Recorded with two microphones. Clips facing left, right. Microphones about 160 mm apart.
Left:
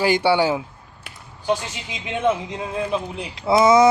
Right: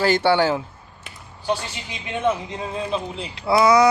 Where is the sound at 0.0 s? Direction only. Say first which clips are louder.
Even; 15° left (ahead or behind).